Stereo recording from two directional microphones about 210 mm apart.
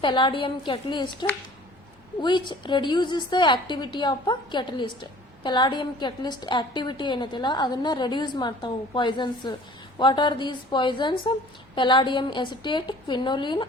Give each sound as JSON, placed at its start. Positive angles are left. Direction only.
{"t": 0.0, "sound": "a woman's voice", "side_deg": 25}